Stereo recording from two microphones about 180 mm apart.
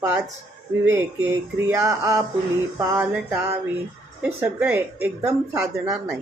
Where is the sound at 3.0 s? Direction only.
5° right (ahead or behind).